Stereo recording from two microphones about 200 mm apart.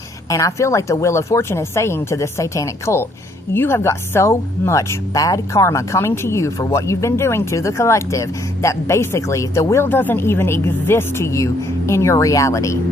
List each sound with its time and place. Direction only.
0.3 s a woman's voice: 15° left (ahead or behind)